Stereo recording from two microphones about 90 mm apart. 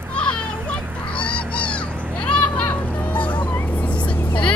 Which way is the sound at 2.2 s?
15° left (ahead or behind).